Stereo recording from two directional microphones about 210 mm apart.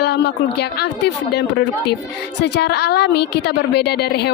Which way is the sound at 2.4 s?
50° left (ahead or behind).